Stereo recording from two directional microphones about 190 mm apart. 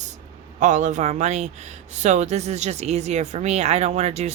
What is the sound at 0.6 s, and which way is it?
Speech, 40° right (ahead or behind).